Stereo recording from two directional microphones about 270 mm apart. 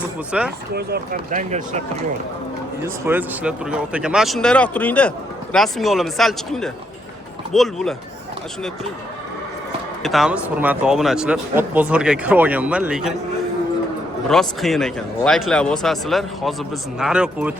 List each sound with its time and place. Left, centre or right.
0.3 s speech: centre
0.7 s speech: right
2.8 s speech: centre
10.0 s speech: centre
14.3 s speech: centre